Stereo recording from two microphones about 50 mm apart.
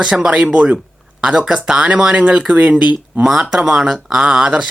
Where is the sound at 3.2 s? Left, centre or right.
Centre.